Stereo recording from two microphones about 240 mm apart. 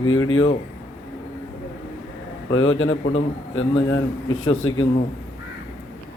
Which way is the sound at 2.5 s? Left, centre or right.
Left.